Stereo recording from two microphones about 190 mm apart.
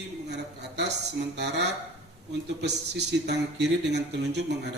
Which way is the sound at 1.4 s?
65° right (ahead or behind).